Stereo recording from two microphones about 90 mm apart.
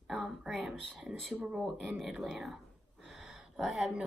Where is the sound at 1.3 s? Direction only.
10° right (ahead or behind).